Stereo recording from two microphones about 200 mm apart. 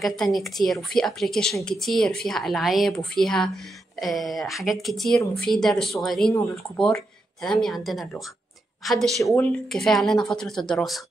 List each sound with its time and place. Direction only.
0.0 s speech: centre (ahead or behind)
9.2 s speech: 15° left (ahead or behind)
9.7 s speech: centre (ahead or behind)